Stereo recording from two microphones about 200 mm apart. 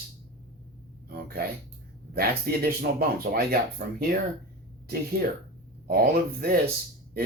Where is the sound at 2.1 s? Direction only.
50° right (ahead or behind).